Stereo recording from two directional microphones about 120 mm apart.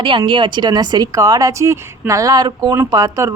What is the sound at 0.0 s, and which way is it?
Speech, 45° right (ahead or behind).